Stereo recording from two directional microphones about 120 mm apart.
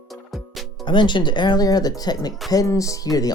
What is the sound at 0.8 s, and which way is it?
Speech, 40° left (ahead or behind).